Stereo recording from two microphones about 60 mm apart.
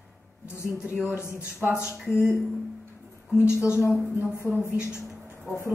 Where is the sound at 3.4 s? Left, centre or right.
Left.